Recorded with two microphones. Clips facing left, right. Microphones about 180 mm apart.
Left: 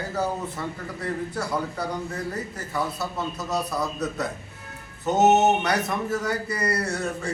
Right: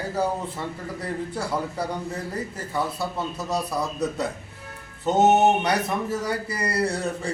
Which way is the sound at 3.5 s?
30° right (ahead or behind).